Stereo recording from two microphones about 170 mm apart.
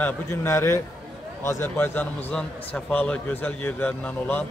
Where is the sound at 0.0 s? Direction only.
15° left (ahead or behind).